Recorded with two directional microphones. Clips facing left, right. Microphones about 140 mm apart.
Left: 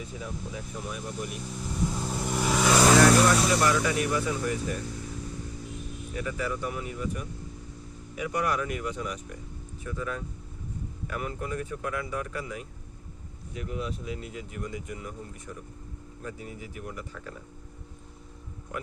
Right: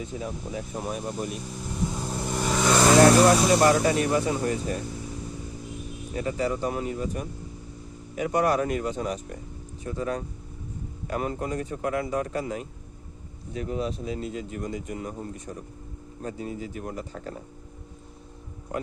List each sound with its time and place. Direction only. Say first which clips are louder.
0.0 s speech: right 4 dB; 30° right (ahead or behind)
0.7 s speech: right 6 dB; 45° right (ahead or behind)
1.6 s vehicle: even; 5° right (ahead or behind)
3.1 s vehicle: right 4 dB; 30° right (ahead or behind)
3.4 s speech: right 5 dB; 35° right (ahead or behind)
6.1 s speech: right 5 dB; 35° right (ahead or behind)